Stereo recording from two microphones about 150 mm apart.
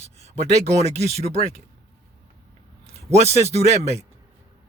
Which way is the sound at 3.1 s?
45° right (ahead or behind).